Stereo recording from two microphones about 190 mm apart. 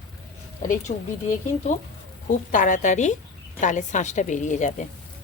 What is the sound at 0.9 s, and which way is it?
Speech, 40° left (ahead or behind).